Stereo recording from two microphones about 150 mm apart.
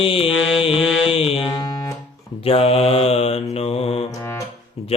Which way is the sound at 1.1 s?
40° left (ahead or behind).